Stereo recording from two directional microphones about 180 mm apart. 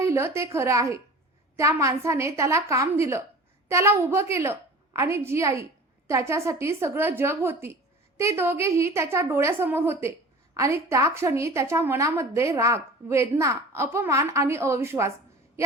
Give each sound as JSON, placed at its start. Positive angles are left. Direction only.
{"t": 0.0, "sound": "a woman's voice", "side_deg": -15}